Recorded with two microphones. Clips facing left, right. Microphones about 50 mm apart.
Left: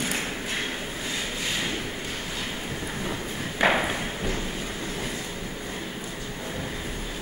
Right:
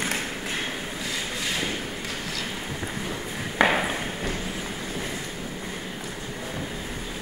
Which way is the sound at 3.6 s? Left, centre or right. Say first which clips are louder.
Right 1 dB; right.